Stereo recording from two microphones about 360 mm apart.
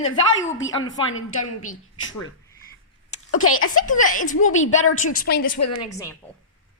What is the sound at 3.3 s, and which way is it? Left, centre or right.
Speech, left.